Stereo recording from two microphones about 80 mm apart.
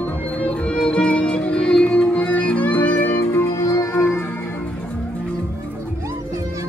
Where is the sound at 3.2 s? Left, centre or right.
Left.